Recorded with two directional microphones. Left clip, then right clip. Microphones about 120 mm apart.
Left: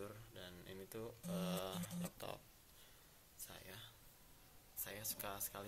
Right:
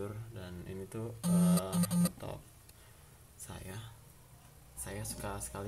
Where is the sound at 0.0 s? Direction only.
25° left (ahead or behind).